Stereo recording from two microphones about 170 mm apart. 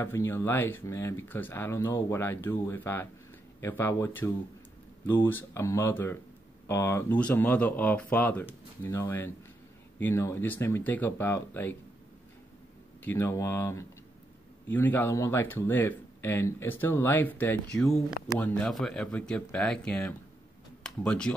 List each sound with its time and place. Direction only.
0.0 s speech: 15° left (ahead or behind)
13.0 s speech: 15° left (ahead or behind)